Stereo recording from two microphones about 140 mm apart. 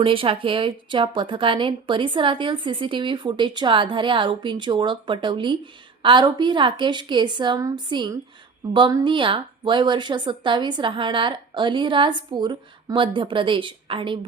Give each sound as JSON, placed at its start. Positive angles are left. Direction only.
{"t": 0.0, "sound": "a woman's voice", "side_deg": -40}